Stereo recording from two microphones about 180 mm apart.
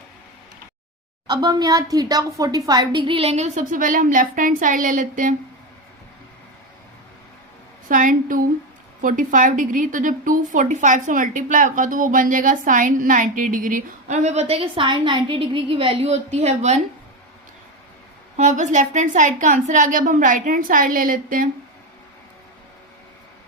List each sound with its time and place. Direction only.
1.3 s a woman's voice: 25° right (ahead or behind); by 5.3 s 45° right (ahead or behind)
7.9 s a woman's voice: 50° right (ahead or behind)
18.3 s a woman's voice: 40° right (ahead or behind)